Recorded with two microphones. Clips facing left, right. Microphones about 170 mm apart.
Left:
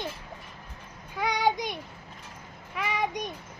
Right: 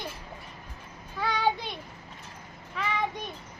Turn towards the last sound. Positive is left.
turn(degrees=15)  # may be behind; listen again after turning